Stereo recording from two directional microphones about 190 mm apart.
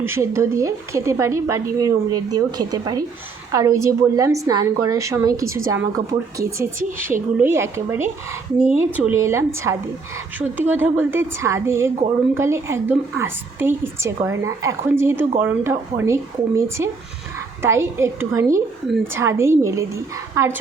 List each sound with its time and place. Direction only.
0.0 s a woman's voice: 15° right (ahead or behind)